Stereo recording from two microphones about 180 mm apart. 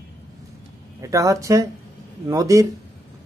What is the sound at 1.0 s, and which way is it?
A man's voice, 20° right (ahead or behind).